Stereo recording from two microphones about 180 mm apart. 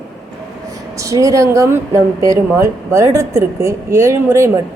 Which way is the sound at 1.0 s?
15° right (ahead or behind).